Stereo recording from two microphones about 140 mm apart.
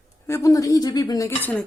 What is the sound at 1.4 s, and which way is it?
Speech, 10° left (ahead or behind).